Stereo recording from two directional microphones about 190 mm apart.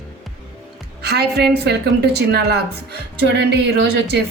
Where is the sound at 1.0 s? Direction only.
60° right (ahead or behind).